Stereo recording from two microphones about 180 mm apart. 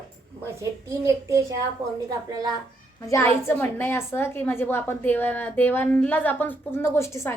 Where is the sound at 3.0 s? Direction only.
15° left (ahead or behind).